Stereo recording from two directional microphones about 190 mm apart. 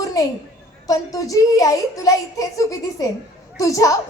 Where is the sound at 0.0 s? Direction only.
20° left (ahead or behind).